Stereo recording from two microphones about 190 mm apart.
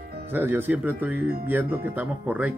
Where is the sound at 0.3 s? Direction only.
10° right (ahead or behind).